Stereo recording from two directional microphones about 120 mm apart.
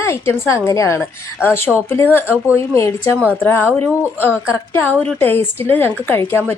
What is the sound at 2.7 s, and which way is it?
Speech, 20° left (ahead or behind).